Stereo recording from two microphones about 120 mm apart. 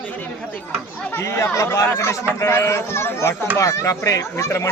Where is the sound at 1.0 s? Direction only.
20° left (ahead or behind).